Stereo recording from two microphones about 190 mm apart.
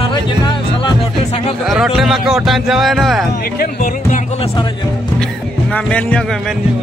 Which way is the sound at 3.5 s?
50° left (ahead or behind).